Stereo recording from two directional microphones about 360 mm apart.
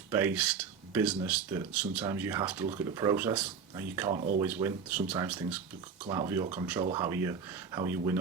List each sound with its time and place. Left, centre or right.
0.1 s speech: centre
4.4 s speech: centre